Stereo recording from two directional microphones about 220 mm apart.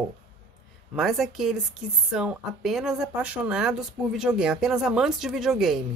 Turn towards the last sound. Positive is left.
turn(degrees=0)  # may be behind; listen again after turning